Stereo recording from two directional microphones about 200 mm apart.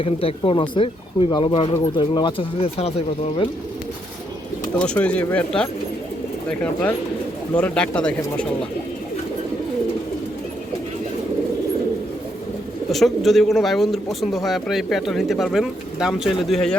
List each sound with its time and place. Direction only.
0.0 s speech: 30° left (ahead or behind)
4.8 s speech: 5° left (ahead or behind)
12.9 s speech: centre (ahead or behind)